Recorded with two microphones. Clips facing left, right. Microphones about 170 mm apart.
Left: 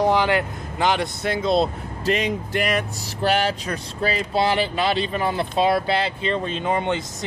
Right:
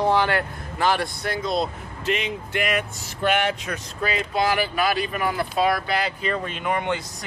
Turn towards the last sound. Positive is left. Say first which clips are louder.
# left 2 dB
turn(degrees=20)  # may be behind; listen again after turning